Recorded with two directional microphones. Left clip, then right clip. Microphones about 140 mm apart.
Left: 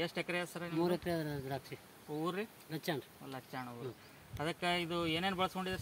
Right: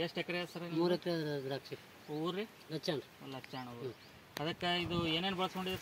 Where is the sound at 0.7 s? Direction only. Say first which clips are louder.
Right 1 dB; 20° left (ahead or behind).